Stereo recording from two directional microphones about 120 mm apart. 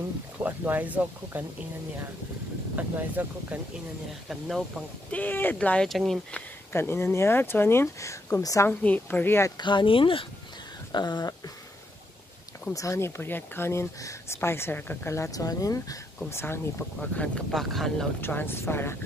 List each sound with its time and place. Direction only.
0.4 s speech: 15° right (ahead or behind)
2.7 s speech: 15° right (ahead or behind)
4.3 s speech: centre (ahead or behind)
5.1 s speech: 15° left (ahead or behind)
6.7 s speech: 20° left (ahead or behind)
8.6 s speech: 15° left (ahead or behind)
9.6 s speech: 40° left (ahead or behind)
10.9 s a sound: 35° left (ahead or behind)
12.7 s speech: 25° left (ahead or behind)
17.2 s speech: centre (ahead or behind)
18.2 s speech: 20° left (ahead or behind)